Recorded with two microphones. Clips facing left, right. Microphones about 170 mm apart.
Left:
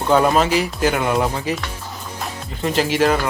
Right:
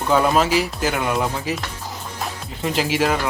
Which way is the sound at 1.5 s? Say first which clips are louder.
Left 2 dB; 5° right (ahead or behind).